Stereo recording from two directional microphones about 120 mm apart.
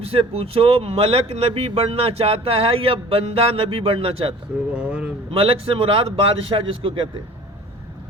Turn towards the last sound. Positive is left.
turn(degrees=-45)  # may be behind; listen again after turning